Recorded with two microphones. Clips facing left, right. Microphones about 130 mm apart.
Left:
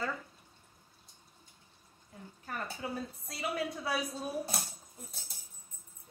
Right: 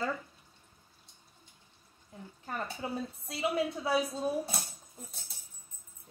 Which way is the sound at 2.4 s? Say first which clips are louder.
Right 2 dB; 25° right (ahead or behind).